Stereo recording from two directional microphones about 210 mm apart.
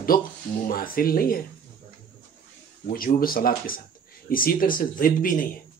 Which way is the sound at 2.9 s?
45° left (ahead or behind).